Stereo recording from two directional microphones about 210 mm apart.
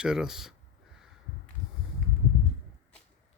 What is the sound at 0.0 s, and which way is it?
Speech, 5° right (ahead or behind).